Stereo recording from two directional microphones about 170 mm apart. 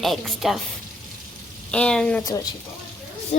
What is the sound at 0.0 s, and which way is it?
Speech, centre (ahead or behind).